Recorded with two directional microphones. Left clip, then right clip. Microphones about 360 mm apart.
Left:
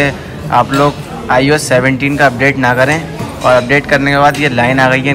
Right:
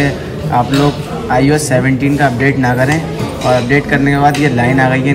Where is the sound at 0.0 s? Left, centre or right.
Centre.